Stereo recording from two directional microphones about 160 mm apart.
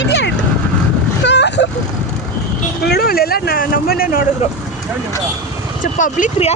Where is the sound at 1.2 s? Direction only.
90° left.